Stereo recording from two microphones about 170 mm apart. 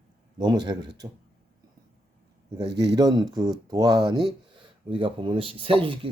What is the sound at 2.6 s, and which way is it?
Speech, 85° right.